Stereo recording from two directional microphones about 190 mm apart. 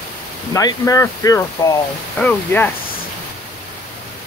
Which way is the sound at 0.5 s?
15° left (ahead or behind).